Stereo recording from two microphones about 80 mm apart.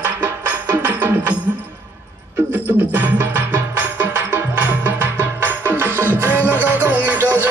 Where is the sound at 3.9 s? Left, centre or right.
Right.